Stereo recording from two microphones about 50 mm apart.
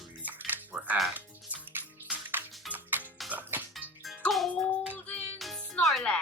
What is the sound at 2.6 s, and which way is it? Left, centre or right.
Music, right.